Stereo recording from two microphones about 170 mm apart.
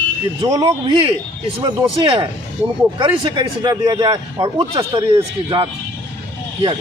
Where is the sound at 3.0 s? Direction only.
30° right (ahead or behind).